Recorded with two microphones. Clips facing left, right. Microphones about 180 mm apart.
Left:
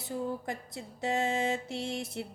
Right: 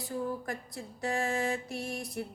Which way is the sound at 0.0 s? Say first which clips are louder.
Even; 20° left (ahead or behind).